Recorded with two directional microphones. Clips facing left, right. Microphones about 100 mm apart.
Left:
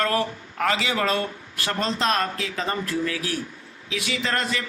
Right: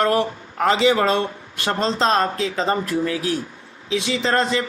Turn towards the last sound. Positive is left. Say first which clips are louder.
# right 6 dB
turn(degrees=-30)  # may be behind; listen again after turning